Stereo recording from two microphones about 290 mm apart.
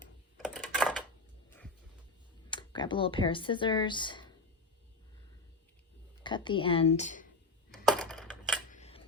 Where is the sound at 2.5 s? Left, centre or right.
Centre.